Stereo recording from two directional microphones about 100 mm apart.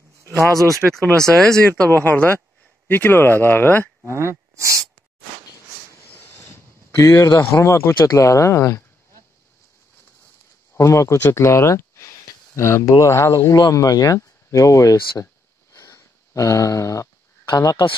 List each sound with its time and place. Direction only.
0.8 s speech: 5° right (ahead or behind)
1.7 s speech: 20° left (ahead or behind)
4.0 s speech: 25° right (ahead or behind)
6.1 s a sound: 25° left (ahead or behind)
10.8 s speech: 30° left (ahead or behind)
15.7 s a sound: 35° left (ahead or behind)